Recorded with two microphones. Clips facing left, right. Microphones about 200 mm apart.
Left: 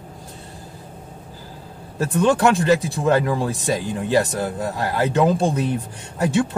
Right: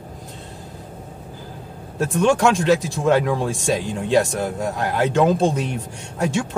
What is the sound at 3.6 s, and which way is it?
Speech, 75° right (ahead or behind).